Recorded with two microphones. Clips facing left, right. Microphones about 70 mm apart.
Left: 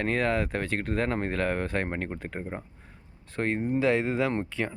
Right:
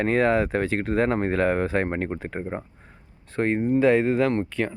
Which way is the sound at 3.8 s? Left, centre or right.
Centre.